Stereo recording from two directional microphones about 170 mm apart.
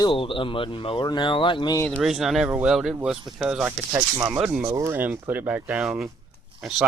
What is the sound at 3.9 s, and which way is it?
Speech, 15° right (ahead or behind).